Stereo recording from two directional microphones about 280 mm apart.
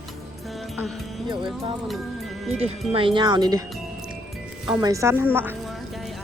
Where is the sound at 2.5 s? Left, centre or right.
Centre.